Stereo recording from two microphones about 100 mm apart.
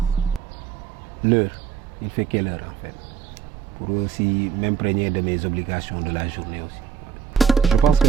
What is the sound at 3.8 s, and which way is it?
Speech, 25° right (ahead or behind).